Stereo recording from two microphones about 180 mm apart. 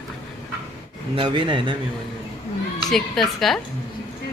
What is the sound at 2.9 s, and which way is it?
Speech, centre (ahead or behind).